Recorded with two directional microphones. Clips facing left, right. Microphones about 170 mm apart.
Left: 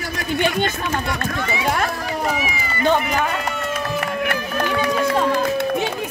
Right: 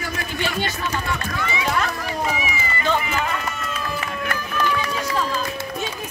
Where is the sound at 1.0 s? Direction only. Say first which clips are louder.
Left 2 dB; 35° left (ahead or behind).